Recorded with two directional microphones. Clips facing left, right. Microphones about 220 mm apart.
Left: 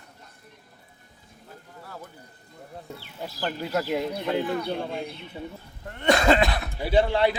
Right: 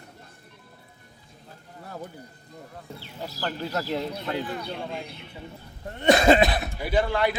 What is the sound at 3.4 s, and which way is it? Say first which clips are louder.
Speech: left 2 dB; 10° left (ahead or behind).